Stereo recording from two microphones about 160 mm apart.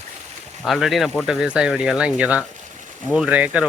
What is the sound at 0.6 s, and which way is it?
Speech, centre (ahead or behind).